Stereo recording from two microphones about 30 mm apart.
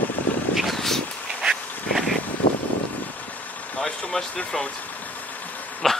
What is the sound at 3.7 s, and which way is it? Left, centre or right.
Vehicle, left.